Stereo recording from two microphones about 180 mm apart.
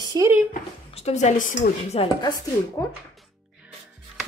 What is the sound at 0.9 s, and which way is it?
A woman's voice, 40° left (ahead or behind).